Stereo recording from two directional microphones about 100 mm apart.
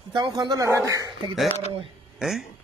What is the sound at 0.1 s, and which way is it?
Speech, 50° right (ahead or behind).